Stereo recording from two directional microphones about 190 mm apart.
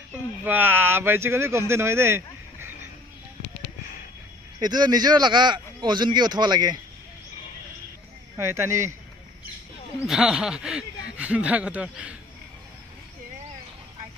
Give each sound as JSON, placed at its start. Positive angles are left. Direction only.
{"t": 0.5, "sound": "speech", "side_deg": -10}
{"t": 4.6, "sound": "a man's voice", "side_deg": -20}
{"t": 8.4, "sound": "speech", "side_deg": -15}
{"t": 10.0, "sound": "speech", "side_deg": 0}